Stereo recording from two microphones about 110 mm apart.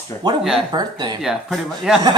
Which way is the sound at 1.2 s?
5° right (ahead or behind).